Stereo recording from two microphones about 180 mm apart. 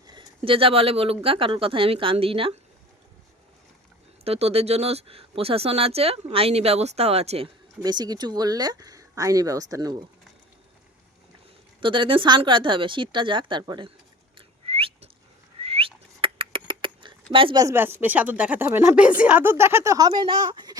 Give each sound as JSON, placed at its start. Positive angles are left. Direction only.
{"t": 0.1, "sound": "speech", "side_deg": -30}
{"t": 4.2, "sound": "speech", "side_deg": -35}
{"t": 11.8, "sound": "speech", "side_deg": -30}
{"t": 14.3, "sound": "whistling", "side_deg": -30}
{"t": 15.6, "sound": "rodents", "side_deg": -30}
{"t": 17.3, "sound": "speech", "side_deg": -25}